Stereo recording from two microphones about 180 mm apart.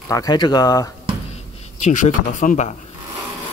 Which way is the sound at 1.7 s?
40° left (ahead or behind).